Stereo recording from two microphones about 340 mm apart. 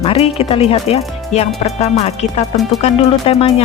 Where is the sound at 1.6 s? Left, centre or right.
Centre.